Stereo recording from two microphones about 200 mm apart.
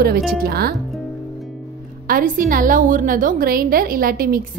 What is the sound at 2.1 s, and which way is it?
A woman's voice, 45° right (ahead or behind).